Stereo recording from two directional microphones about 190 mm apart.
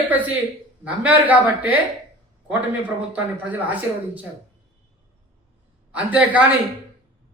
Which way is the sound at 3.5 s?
10° right (ahead or behind).